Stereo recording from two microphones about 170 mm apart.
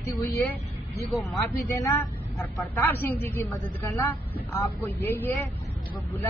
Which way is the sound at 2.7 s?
10° left (ahead or behind).